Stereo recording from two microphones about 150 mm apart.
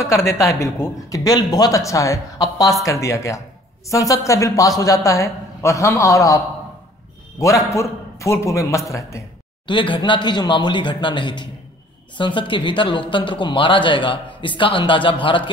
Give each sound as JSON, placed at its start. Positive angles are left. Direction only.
{"t": 0.0, "sound": "a man's voice", "side_deg": 20}
{"t": 9.7, "sound": "speech", "side_deg": 35}